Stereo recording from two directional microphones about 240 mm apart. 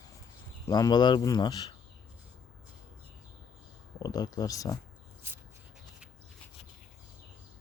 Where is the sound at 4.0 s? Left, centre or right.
Centre.